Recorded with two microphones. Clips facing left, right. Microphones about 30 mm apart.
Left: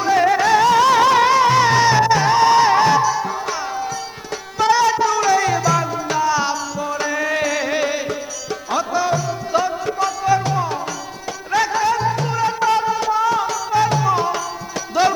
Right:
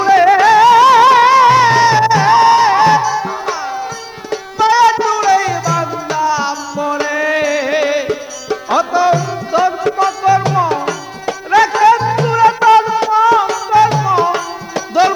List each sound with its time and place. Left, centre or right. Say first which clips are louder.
0.0 s music: right 7 dB; right
1.5 s music: right 5 dB; right
2.1 s music: right 6 dB; right
2.5 s music: right 4 dB; right
2.8 s music: right 4 dB; right
4.3 s music: right 5 dB; right
5.5 s music: right 2 dB; centre
5.8 s music: right 3 dB; centre
6.7 s music: right 5 dB; right
7.7 s music: right 6 dB; right
8.7 s music: right 7 dB; right
11.9 s music: right 7 dB; right
12.9 s music: right 7 dB; right
13.9 s music: right 5 dB; right